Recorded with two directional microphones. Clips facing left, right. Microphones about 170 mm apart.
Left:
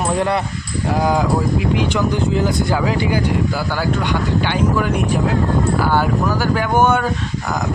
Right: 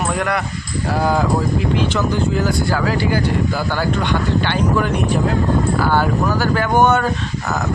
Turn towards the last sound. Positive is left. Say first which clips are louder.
# right 1 dB
turn(degrees=10)  # may be behind; listen again after turning